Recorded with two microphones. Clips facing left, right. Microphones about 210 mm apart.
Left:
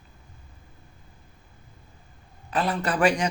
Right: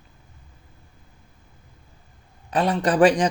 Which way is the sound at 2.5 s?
30° right (ahead or behind).